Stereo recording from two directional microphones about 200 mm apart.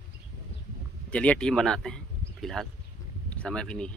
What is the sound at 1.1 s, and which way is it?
Speech, 5° left (ahead or behind).